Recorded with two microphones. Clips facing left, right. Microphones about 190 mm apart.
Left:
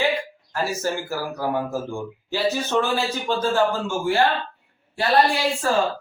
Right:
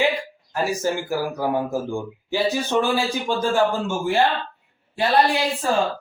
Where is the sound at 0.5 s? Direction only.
15° right (ahead or behind).